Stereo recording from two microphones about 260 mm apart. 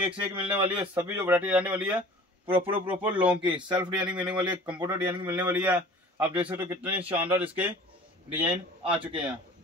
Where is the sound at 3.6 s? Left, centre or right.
Centre.